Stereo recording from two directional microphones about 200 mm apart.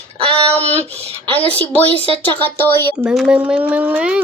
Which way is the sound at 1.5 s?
10° left (ahead or behind).